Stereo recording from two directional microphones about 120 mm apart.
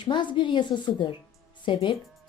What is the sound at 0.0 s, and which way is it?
A woman's voice, 40° left (ahead or behind).